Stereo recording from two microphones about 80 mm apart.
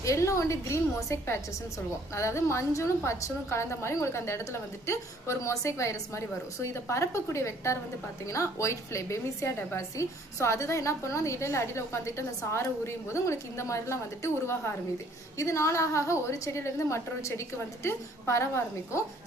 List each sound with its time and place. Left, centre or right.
0.0 s a woman's voice: left